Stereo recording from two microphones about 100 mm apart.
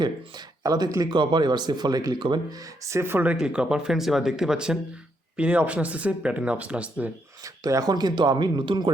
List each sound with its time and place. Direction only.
0.0 s speech: 45° right (ahead or behind)
1.1 s speech: 50° right (ahead or behind); by 3.3 s 20° right (ahead or behind)
3.4 s speech: 10° right (ahead or behind)
7.4 s speech: 35° right (ahead or behind); by 8.9 s 50° right (ahead or behind)